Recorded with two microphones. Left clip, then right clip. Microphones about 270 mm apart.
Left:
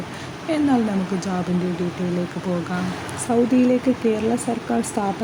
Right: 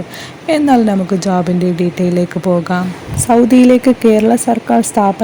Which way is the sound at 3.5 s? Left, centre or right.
Right.